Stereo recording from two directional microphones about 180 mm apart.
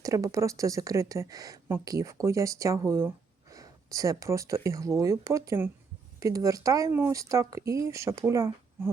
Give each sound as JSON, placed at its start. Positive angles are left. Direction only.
{"t": 0.0, "sound": "speech", "side_deg": -15}